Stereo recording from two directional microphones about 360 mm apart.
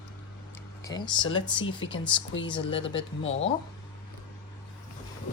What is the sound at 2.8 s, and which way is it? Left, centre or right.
Speech, left.